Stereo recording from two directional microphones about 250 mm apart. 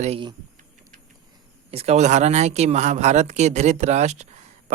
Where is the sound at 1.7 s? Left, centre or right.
Right.